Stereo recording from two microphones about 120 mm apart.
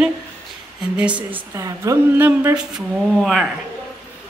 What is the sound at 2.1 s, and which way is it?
Speech, 15° right (ahead or behind).